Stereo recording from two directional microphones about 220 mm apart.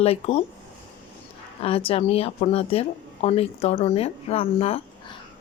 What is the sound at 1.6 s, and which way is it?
Speech, 25° left (ahead or behind).